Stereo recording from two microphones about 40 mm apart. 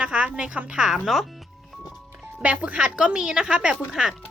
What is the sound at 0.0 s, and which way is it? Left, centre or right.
Speech, right.